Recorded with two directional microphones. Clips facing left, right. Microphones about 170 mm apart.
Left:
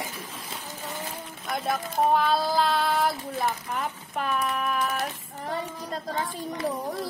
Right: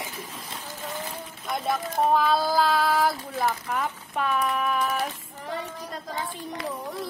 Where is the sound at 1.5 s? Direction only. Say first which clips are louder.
Right 1 dB; centre (ahead or behind).